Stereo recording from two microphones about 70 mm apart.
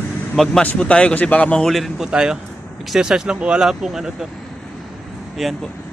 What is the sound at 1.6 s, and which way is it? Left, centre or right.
Speech, centre.